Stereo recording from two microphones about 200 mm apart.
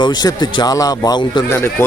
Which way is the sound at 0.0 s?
20° left (ahead or behind).